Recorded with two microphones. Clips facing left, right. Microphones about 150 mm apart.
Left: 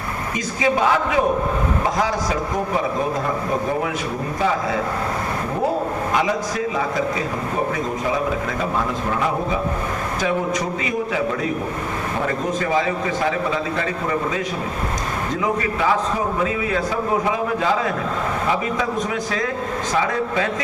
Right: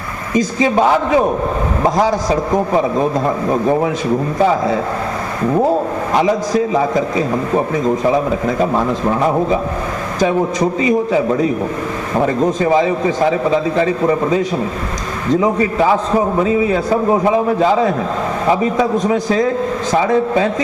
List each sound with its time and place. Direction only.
0.3 s a man's voice: 35° right (ahead or behind)
12.6 s a man's voice: 30° right (ahead or behind)
15.4 s a man's voice: 35° right (ahead or behind)